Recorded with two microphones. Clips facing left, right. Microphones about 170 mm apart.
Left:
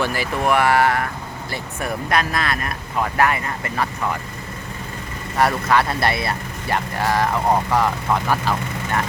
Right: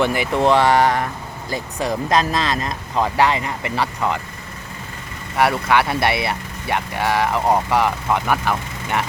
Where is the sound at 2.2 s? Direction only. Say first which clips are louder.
Right 2 dB; 25° right (ahead or behind).